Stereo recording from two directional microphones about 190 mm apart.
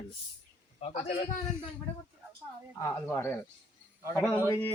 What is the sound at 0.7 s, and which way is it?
Speech, 35° left (ahead or behind).